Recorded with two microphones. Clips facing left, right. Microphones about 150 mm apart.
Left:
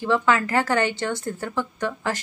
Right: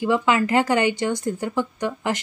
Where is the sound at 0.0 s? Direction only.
15° right (ahead or behind).